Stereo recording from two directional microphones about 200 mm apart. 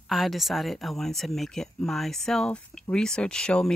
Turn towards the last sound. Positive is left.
turn(degrees=5)  # may be behind; listen again after turning